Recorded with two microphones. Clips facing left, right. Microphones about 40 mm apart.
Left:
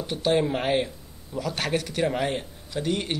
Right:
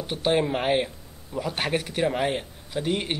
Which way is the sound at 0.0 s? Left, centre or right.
Centre.